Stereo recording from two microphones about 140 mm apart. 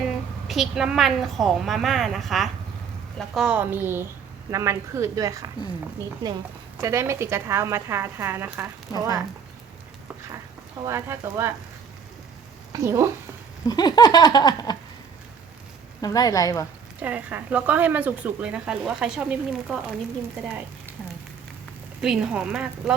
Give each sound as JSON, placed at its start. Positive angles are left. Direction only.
{"t": 0.4, "sound": "a woman's voice", "side_deg": 0}
{"t": 6.7, "sound": "speech", "side_deg": -20}
{"t": 10.8, "sound": "speech", "side_deg": -20}
{"t": 12.7, "sound": "speech", "side_deg": -20}
{"t": 13.7, "sound": "a sound", "side_deg": 30}
{"t": 16.0, "sound": "a sound", "side_deg": 25}
{"t": 17.0, "sound": "speech", "side_deg": -10}
{"t": 22.0, "sound": "a woman's voice", "side_deg": -5}